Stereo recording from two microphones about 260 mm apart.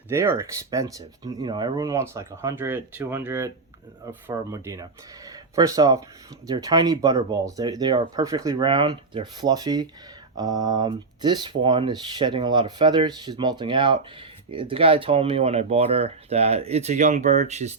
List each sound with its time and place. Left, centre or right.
0.1 s speech: centre; by 17.7 s right